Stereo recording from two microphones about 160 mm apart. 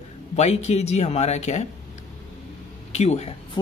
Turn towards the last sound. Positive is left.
turn(degrees=45)  # may be behind; listen again after turning